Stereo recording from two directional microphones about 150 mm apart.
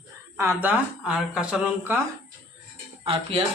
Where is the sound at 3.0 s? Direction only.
40° right (ahead or behind).